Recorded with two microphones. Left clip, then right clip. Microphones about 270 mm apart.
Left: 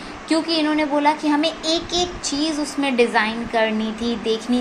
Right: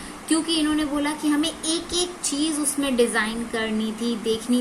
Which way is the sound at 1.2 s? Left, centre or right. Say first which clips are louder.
Left 4 dB; right.